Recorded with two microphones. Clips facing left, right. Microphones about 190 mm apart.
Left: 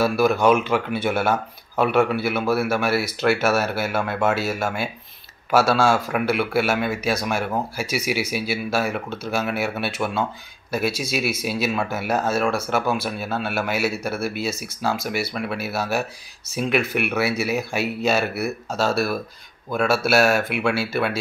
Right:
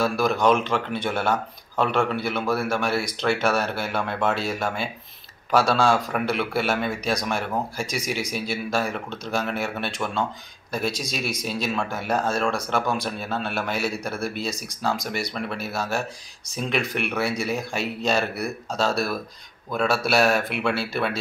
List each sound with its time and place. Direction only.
0.0 s speech: 5° left (ahead or behind)